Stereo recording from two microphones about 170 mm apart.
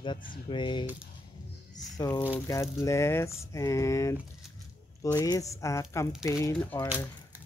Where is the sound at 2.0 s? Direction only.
20° left (ahead or behind).